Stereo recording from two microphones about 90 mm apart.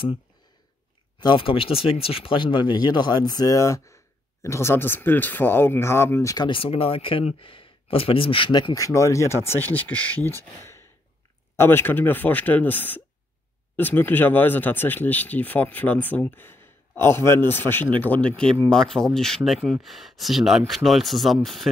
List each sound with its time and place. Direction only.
1.2 s speech: 70° left (ahead or behind); by 6.3 s 25° left (ahead or behind)
6.5 s speech: 90° left; by 8.7 s 60° left (ahead or behind)
8.7 s speech: 35° left (ahead or behind); by 21.6 s centre (ahead or behind)